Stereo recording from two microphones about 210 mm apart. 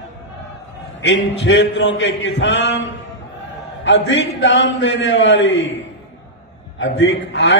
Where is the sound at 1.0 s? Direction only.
60° left (ahead or behind).